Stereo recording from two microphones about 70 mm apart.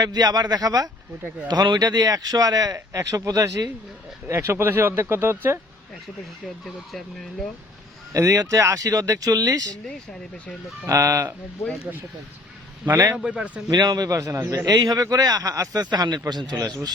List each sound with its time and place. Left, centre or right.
0.0 s a man's voice: right
1.5 s speech: right
4.3 s speech: right
8.1 s speech: right
10.8 s speech: right
13.1 s speech: centre
13.7 s speech: right
15.9 s a man's voice: right
16.6 s a man's voice: right